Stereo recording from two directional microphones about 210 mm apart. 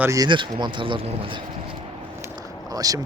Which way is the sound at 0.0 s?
15° right (ahead or behind).